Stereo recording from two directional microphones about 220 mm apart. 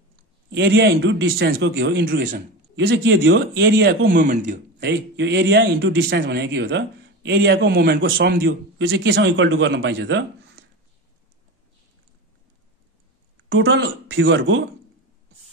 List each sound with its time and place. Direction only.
0.5 s a man's voice: 50° right (ahead or behind)
2.7 s a man's voice: 55° right (ahead or behind)
4.2 s speech: 35° right (ahead or behind)
4.7 s a man's voice: 50° right (ahead or behind)
13.5 s a man's voice: 50° right (ahead or behind)